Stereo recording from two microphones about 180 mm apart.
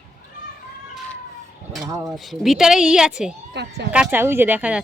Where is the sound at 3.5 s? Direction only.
70° right (ahead or behind).